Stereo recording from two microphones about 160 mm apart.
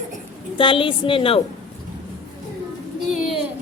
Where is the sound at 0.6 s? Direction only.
35° left (ahead or behind).